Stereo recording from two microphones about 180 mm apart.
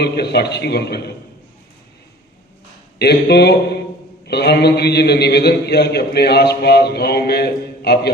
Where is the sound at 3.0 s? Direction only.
65° left (ahead or behind).